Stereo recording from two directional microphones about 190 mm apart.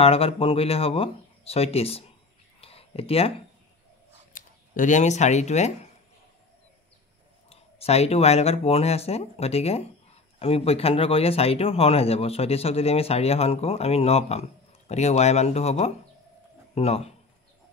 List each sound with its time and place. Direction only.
0.0 s speech: 30° left (ahead or behind)
2.6 s a sound: 30° left (ahead or behind)
4.3 s speech: 45° left (ahead or behind)
7.4 s speech: 35° left (ahead or behind)